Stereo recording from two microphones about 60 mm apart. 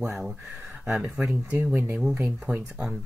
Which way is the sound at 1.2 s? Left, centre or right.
Centre.